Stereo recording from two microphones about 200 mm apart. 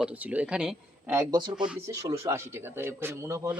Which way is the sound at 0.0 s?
5° right (ahead or behind).